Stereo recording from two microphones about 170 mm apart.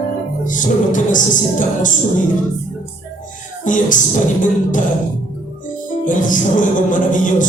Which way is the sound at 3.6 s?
50° left (ahead or behind).